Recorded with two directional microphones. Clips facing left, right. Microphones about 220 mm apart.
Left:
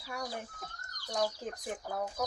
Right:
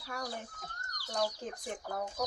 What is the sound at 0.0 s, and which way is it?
Speech, 5° left (ahead or behind).